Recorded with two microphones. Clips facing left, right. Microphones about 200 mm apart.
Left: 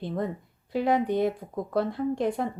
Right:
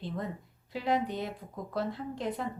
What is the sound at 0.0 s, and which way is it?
Speech, 55° left (ahead or behind).